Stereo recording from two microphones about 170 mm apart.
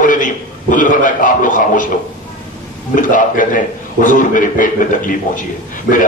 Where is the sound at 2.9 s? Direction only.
50° left (ahead or behind).